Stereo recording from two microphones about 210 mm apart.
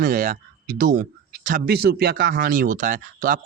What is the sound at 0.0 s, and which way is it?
Speech, 40° right (ahead or behind).